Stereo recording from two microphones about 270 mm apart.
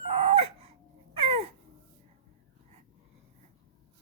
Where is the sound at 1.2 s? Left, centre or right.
Right.